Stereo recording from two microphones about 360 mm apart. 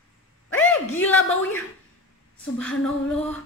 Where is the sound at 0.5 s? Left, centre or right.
Centre.